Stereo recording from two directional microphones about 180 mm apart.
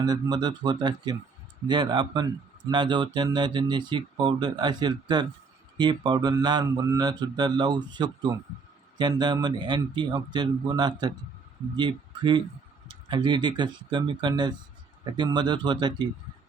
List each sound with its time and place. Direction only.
0.0 s speech: 25° right (ahead or behind)